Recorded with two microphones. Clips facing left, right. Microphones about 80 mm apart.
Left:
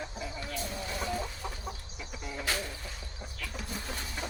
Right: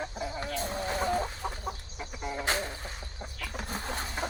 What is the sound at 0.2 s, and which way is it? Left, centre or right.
Chicken, right.